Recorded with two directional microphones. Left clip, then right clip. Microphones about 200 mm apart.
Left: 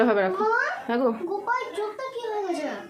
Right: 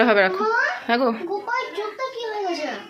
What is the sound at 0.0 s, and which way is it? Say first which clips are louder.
Speech: right 4 dB; centre (ahead or behind).